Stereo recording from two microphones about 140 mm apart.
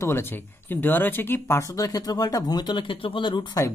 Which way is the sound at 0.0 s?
15° left (ahead or behind).